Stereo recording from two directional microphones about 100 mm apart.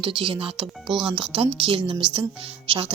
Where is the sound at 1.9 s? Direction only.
55° right (ahead or behind).